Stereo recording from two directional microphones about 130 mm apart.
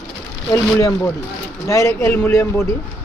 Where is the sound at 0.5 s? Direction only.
25° left (ahead or behind).